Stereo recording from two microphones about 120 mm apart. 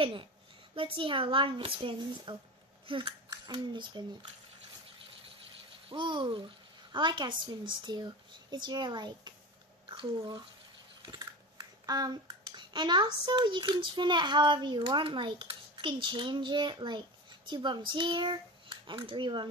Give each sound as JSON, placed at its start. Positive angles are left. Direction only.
{"t": 0.0, "sound": "a child's voice", "side_deg": -45}
{"t": 5.9, "sound": "a child's voice", "side_deg": -40}
{"t": 11.0, "sound": "a sound", "side_deg": -35}
{"t": 11.8, "sound": "a child's voice", "side_deg": -30}